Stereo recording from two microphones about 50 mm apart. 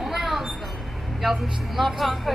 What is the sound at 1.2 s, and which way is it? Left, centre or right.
Speech, centre.